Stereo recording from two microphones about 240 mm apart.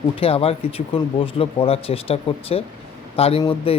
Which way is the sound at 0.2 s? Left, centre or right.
Left.